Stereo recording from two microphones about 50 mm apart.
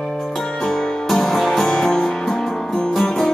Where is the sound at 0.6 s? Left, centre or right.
Centre.